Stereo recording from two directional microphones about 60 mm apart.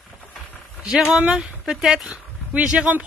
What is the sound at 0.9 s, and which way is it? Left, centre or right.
Speech, centre.